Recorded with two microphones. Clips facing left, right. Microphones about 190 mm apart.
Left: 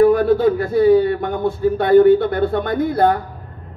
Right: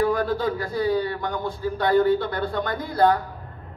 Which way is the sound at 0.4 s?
60° left (ahead or behind).